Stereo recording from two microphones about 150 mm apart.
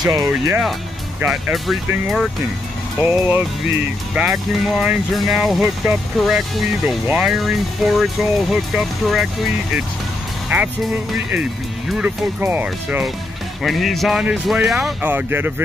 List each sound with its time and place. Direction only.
0.0 s speech: 25° right (ahead or behind)
1.2 s speech: 5° right (ahead or behind)
3.0 s speech: 10° right (ahead or behind)
10.5 s speech: 15° right (ahead or behind)
11.9 s speech: 10° right (ahead or behind)
13.6 s speech: centre (ahead or behind)